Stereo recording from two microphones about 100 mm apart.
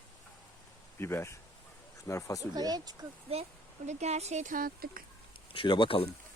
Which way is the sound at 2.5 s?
40° right (ahead or behind).